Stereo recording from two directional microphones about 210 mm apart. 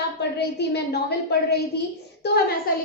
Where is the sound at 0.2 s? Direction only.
55° left (ahead or behind).